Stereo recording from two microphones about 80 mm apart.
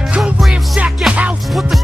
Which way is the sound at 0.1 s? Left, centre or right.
Centre.